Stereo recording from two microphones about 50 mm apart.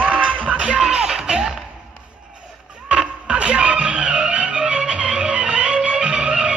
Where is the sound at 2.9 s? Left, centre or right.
Right.